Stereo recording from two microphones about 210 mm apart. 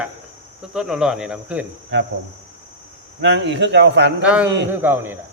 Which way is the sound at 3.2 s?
55° right (ahead or behind).